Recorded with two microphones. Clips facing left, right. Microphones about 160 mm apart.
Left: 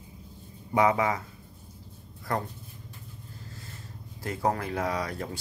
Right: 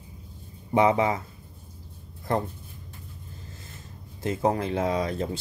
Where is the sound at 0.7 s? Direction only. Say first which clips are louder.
Right 3 dB; 25° right (ahead or behind).